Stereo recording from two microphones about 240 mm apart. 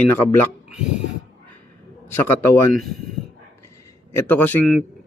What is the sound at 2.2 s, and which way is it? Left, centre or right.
Speech, centre.